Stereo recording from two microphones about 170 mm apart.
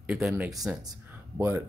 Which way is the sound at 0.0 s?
5° right (ahead or behind).